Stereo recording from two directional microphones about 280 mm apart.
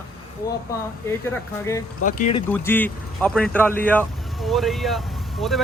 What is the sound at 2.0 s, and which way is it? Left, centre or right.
Speech, left.